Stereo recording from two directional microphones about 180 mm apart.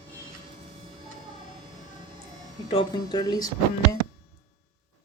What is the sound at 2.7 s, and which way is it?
Speech, 25° left (ahead or behind).